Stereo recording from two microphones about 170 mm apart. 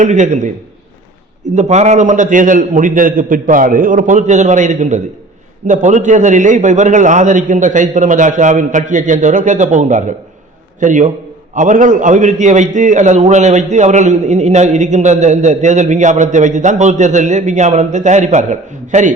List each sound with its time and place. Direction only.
0.0 s a man's voice: 45° right (ahead or behind)
1.5 s a man's voice: 40° right (ahead or behind)